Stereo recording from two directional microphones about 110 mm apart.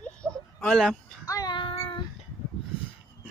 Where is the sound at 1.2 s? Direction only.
30° left (ahead or behind).